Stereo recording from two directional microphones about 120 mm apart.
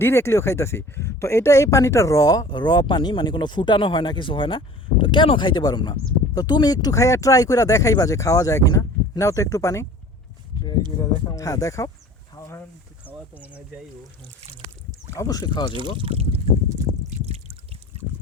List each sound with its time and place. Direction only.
0.0 s speech: 20° left (ahead or behind)
11.3 s speech: 30° left (ahead or behind)
12.4 s a sound: 25° left (ahead or behind)
13.1 s speech: 15° right (ahead or behind)
15.1 s speech: 30° left (ahead or behind)
15.8 s speech: 50° right (ahead or behind)
17.2 s trickle: 60° right (ahead or behind)